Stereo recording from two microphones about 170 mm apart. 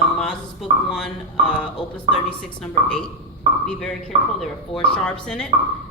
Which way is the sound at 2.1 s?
30° right (ahead or behind).